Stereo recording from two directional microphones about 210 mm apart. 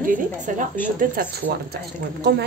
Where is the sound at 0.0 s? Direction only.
40° right (ahead or behind).